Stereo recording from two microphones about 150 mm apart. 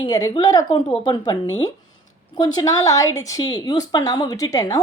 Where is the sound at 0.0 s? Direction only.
25° left (ahead or behind).